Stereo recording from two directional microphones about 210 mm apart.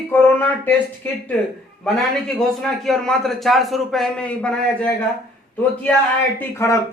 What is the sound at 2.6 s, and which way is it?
A man's voice, centre (ahead or behind).